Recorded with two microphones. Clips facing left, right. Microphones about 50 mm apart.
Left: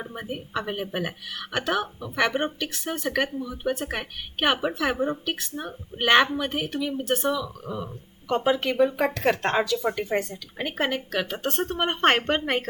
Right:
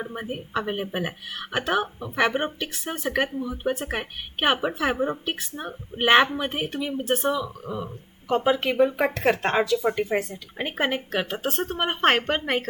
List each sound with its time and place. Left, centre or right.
0.0 s a woman's voice: centre
10.6 s a woman's voice: centre
11.4 s speech: centre